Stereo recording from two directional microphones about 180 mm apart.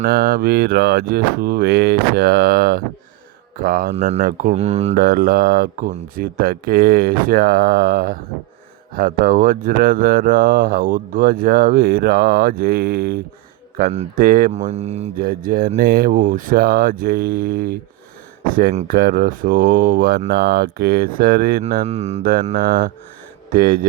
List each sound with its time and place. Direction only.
0.0 s speech: 60° right (ahead or behind)
3.9 s speech: 40° right (ahead or behind)
4.9 s speech: 55° right (ahead or behind)
14.5 s speech: 35° right (ahead or behind)
15.2 s speech: 50° right (ahead or behind)
21.8 s speech: 35° right (ahead or behind)
22.2 s speech: 55° right (ahead or behind)